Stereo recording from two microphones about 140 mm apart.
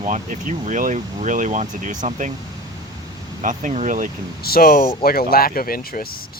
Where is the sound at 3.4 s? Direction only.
65° right (ahead or behind).